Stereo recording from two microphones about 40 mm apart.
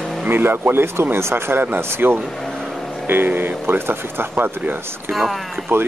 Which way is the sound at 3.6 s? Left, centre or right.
Right.